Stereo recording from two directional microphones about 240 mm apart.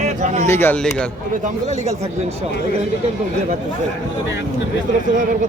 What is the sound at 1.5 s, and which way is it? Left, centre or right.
Speech, right.